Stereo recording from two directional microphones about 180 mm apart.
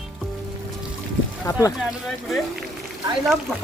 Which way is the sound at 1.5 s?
20° left (ahead or behind).